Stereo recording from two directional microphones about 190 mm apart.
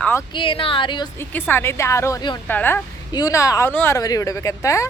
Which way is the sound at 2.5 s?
10° left (ahead or behind).